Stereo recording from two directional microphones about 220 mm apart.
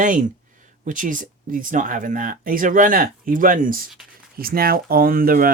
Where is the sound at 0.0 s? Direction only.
35° right (ahead or behind).